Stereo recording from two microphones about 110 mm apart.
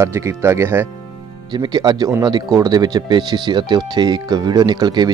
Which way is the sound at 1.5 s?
40° right (ahead or behind).